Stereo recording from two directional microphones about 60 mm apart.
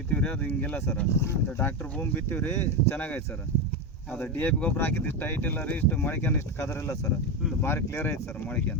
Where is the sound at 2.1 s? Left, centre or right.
Left.